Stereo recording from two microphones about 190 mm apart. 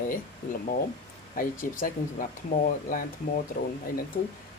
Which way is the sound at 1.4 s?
45° left (ahead or behind).